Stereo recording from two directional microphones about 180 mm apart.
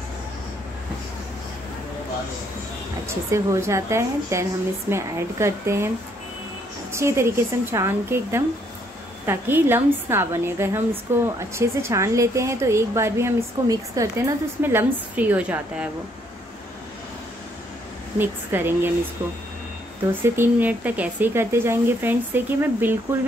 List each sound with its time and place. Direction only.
3.1 s speech: 15° right (ahead or behind)
6.9 s speech: 15° right (ahead or behind)
18.1 s speech: 10° right (ahead or behind)
20.1 s speech: 10° right (ahead or behind)